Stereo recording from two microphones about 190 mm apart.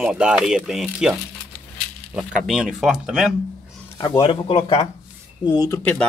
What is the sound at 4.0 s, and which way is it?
Speech, 25° left (ahead or behind).